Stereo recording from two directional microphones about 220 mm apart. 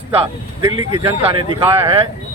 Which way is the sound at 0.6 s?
15° right (ahead or behind).